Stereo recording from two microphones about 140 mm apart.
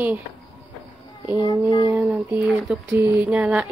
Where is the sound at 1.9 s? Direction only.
10° right (ahead or behind).